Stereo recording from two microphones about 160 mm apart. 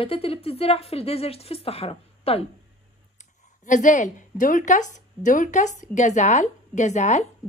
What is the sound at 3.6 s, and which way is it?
A woman's voice, 50° left (ahead or behind).